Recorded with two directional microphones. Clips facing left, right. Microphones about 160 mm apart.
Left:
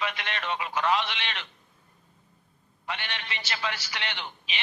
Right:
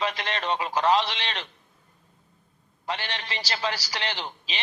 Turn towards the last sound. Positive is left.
turn(degrees=-35)  # may be behind; listen again after turning